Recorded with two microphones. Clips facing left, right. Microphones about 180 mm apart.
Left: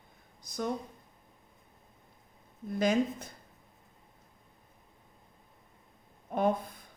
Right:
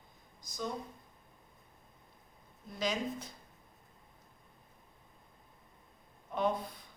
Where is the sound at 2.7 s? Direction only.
50° left (ahead or behind).